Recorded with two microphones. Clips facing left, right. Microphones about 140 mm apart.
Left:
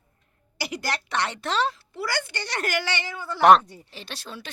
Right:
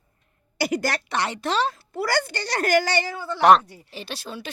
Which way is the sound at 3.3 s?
Centre (ahead or behind).